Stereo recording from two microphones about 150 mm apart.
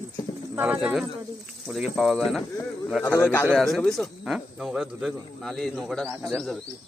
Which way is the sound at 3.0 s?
15° left (ahead or behind).